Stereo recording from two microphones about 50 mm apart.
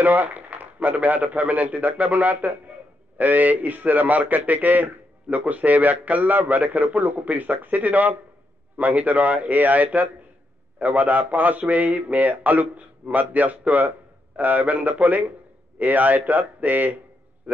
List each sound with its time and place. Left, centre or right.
0.0 s a man's voice: right